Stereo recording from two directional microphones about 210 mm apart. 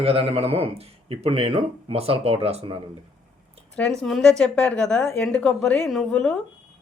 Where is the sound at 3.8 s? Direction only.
5° left (ahead or behind).